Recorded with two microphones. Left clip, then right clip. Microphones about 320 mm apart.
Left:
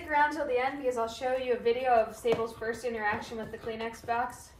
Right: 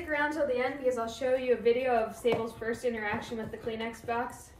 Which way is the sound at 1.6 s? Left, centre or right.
Centre.